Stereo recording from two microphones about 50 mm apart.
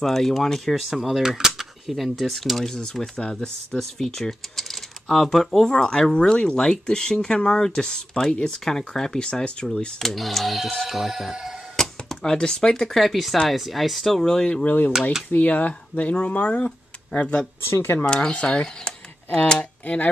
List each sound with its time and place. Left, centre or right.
0.0 s speech: centre
2.6 s speech: centre
5.7 s speech: centre
9.9 s speech: centre
11.7 s a sound: centre
12.8 s speech: centre
14.6 s speech: left
18.0 s speech: centre